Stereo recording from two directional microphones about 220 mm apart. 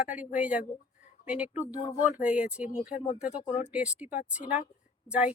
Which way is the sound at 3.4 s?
30° left (ahead or behind).